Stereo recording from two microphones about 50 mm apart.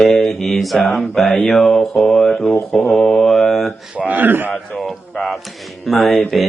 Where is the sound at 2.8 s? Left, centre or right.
Left.